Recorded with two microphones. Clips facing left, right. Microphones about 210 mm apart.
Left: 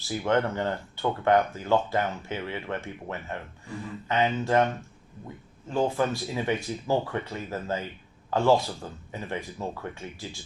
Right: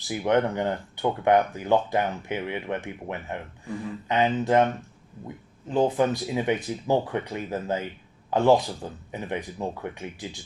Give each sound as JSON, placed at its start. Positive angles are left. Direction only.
{"t": 0.0, "sound": "speech", "side_deg": -15}
{"t": 5.6, "sound": "speech", "side_deg": -20}